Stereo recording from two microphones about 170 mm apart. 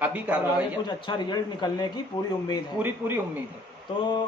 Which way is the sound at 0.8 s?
25° left (ahead or behind).